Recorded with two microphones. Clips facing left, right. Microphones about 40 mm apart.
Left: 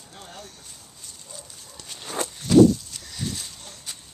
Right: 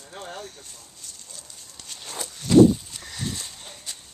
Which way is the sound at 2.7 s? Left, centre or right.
Centre.